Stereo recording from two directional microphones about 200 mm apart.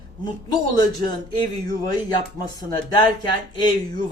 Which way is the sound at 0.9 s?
20° left (ahead or behind).